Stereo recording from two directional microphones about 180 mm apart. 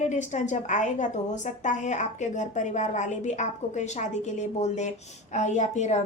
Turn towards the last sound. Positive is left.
turn(degrees=40)  # may be behind; listen again after turning